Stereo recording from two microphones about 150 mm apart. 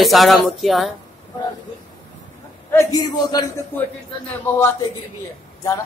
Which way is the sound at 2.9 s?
25° left (ahead or behind).